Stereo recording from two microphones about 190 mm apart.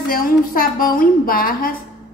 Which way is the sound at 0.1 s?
50° left (ahead or behind).